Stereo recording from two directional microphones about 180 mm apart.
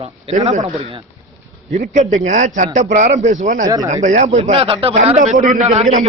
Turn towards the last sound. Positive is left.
turn(degrees=-35)  # may be behind; listen again after turning